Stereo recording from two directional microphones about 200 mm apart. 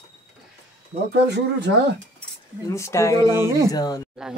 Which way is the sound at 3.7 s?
20° left (ahead or behind).